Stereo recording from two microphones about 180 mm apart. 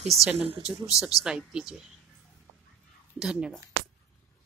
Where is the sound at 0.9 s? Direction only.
5° right (ahead or behind).